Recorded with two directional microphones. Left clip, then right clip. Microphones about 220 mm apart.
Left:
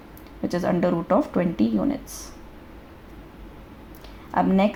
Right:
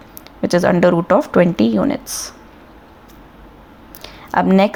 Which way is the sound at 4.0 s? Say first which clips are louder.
Right 6 dB; 30° right (ahead or behind).